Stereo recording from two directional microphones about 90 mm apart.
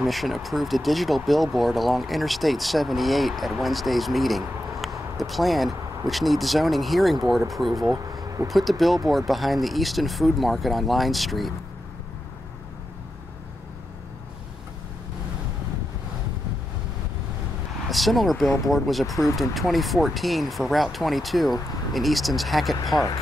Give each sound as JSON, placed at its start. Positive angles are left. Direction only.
{"t": 0.0, "sound": "speech", "side_deg": 0}
{"t": 7.8, "sound": "a sound", "side_deg": -40}
{"t": 8.5, "sound": "speech", "side_deg": 0}
{"t": 17.8, "sound": "speech", "side_deg": 0}